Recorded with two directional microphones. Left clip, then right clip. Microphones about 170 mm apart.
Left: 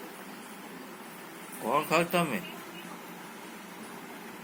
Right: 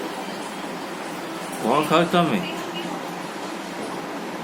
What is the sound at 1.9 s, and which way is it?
Speech, 25° left (ahead or behind).